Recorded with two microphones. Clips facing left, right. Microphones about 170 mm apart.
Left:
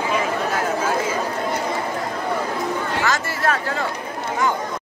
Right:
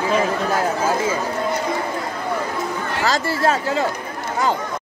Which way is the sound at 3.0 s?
30° right (ahead or behind).